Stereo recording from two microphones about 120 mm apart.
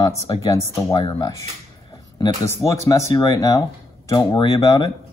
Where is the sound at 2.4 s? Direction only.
25° left (ahead or behind).